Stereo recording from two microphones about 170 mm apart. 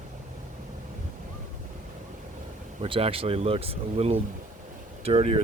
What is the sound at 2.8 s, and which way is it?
Speech, 35° right (ahead or behind).